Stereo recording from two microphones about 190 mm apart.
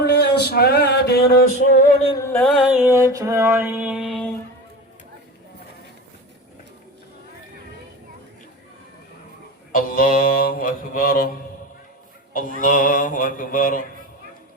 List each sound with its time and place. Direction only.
0.0 s music: 60° left (ahead or behind)
2.0 s music: 15° left (ahead or behind)
2.4 s music: centre (ahead or behind)
2.8 s music: 15° right (ahead or behind); by 4.3 s centre (ahead or behind)
9.7 s mantra: 50° left (ahead or behind)
12.3 s mantra: 45° left (ahead or behind)